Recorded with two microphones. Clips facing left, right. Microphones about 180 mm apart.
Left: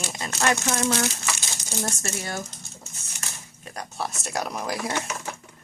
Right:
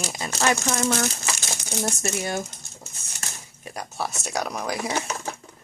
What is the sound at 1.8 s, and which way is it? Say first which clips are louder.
Speech: right 3 dB; 15° right (ahead or behind).